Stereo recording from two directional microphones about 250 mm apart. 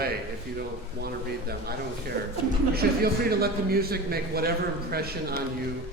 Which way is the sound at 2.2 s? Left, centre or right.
Right.